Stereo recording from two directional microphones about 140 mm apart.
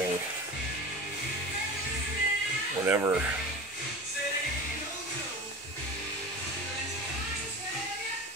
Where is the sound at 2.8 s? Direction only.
15° right (ahead or behind).